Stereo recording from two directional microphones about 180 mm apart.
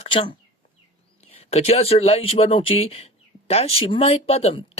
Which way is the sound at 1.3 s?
35° left (ahead or behind).